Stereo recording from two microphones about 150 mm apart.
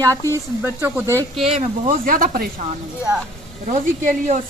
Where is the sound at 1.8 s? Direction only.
70° right (ahead or behind).